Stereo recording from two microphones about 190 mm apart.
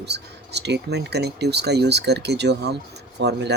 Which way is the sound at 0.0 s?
60° right (ahead or behind).